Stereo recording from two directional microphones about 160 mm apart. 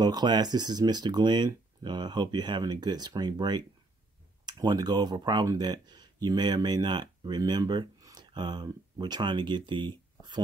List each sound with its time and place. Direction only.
0.0 s speech: 25° right (ahead or behind)